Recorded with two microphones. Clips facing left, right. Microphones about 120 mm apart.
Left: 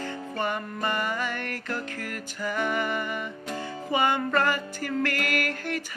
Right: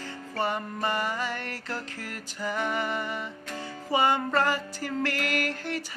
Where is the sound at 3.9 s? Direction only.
30° right (ahead or behind).